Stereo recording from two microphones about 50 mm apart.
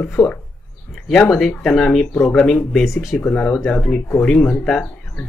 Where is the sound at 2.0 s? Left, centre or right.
Left.